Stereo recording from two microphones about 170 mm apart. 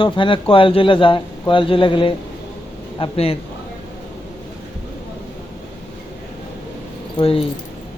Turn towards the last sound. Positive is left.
turn(degrees=35)  # may be behind; listen again after turning